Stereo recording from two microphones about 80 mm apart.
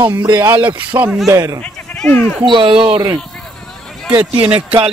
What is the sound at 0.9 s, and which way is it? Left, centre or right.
Speech, right.